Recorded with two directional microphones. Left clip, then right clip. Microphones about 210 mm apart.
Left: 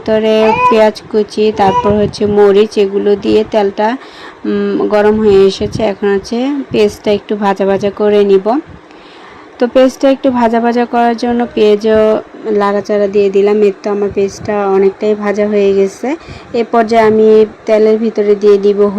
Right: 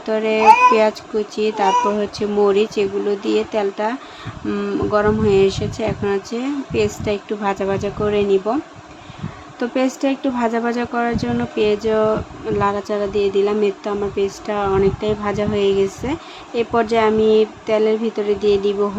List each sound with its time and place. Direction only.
0.0 s speech: 25° left (ahead or behind)
9.6 s speech: 25° left (ahead or behind)
16.9 s speech: 20° left (ahead or behind)